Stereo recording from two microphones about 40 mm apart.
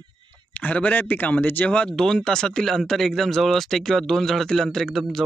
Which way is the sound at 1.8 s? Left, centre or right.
Centre.